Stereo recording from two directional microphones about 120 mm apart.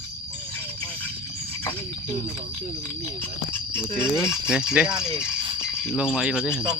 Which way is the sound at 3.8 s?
20° left (ahead or behind).